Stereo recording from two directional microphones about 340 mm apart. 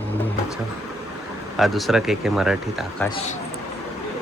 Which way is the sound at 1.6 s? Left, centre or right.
Centre.